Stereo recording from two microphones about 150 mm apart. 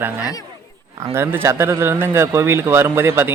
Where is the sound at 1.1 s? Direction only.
15° right (ahead or behind).